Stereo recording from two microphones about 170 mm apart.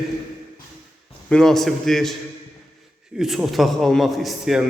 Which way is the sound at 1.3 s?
5° left (ahead or behind).